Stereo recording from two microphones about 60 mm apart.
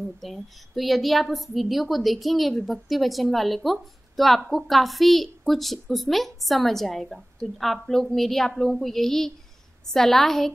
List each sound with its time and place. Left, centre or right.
0.2 s a woman's voice: centre